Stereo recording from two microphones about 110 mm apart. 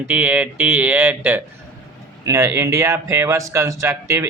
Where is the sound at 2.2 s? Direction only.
25° right (ahead or behind).